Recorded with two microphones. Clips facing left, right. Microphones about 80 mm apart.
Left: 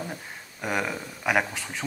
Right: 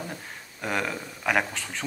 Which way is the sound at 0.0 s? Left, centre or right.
Centre.